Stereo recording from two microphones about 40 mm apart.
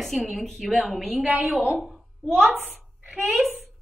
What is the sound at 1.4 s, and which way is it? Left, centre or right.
Speech, centre.